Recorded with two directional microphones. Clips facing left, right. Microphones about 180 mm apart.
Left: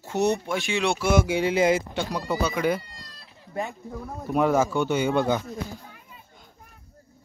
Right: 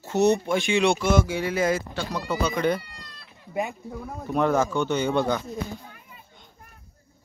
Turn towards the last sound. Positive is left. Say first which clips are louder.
# left 1 dB
turn(degrees=5)  # may be behind; listen again after turning